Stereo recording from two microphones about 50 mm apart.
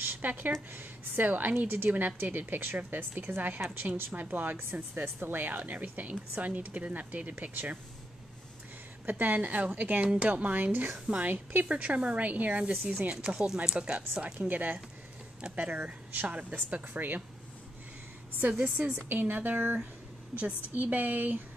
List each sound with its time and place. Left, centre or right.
0.0 s a sound: right
0.7 s a woman's voice: right
4.1 s a woman's voice: right
9.0 s a woman's voice: right
13.2 s a woman's voice: centre; by 17.2 s right
18.5 s speech: right
18.9 s a woman's voice: right